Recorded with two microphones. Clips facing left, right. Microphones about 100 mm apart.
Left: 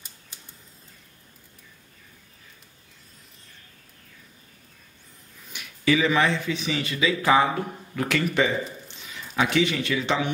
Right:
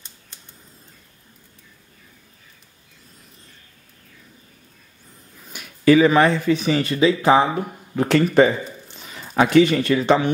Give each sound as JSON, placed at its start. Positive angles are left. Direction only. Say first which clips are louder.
{"t": 5.5, "sound": "speech", "louder": "right 8 dB", "side_deg": -45}
{"t": 7.2, "sound": "speech", "louder": "right 4 dB", "side_deg": -25}